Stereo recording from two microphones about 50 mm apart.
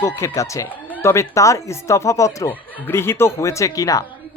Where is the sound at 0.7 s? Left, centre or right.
Left.